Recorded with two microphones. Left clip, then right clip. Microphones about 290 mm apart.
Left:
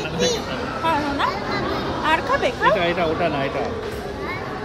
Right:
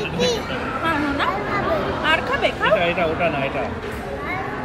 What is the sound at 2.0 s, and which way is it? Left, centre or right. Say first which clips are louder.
Vehicle: left 1 dB; left.